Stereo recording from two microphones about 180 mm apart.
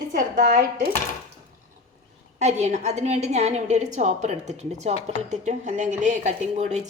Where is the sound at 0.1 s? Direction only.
50° right (ahead or behind).